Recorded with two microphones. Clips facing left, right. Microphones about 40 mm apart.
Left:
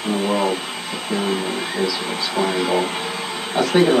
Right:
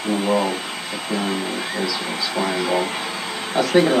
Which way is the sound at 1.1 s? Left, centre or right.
Centre.